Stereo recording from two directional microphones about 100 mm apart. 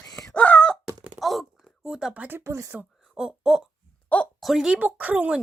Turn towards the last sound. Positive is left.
turn(degrees=-15)  # may be behind; listen again after turning